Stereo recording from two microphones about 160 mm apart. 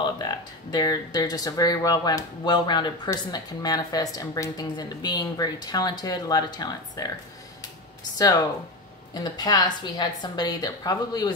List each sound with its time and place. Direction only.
0.0 s speech: 25° left (ahead or behind)
9.1 s speech: 25° left (ahead or behind)